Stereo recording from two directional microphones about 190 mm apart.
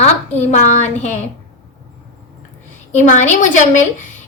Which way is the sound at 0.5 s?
40° left (ahead or behind).